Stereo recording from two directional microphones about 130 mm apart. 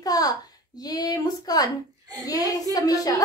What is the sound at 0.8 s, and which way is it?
Speech, 30° left (ahead or behind).